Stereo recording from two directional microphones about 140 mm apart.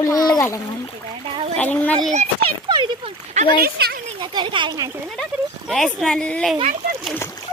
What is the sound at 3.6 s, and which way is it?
Speech, 90° right.